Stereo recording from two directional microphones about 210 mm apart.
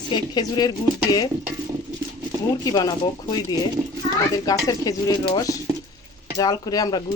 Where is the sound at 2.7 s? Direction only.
20° left (ahead or behind).